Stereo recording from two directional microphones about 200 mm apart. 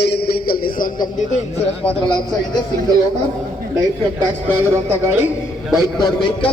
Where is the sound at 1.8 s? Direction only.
25° left (ahead or behind).